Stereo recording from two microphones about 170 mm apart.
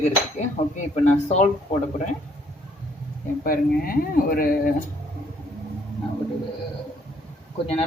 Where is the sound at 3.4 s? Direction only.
60° left (ahead or behind).